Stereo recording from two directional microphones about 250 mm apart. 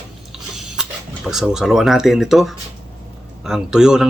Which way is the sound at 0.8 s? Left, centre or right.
Centre.